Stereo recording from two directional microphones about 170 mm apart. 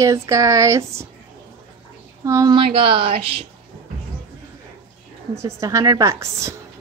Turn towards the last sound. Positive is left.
turn(degrees=-15)  # may be behind; listen again after turning